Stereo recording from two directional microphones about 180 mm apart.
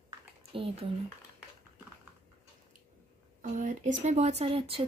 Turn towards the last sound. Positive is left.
turn(degrees=-30)  # may be behind; listen again after turning